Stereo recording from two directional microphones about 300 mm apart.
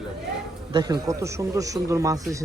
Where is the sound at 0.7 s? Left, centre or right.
Centre.